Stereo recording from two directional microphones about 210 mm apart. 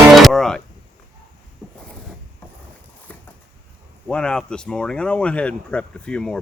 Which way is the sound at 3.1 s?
5° left (ahead or behind).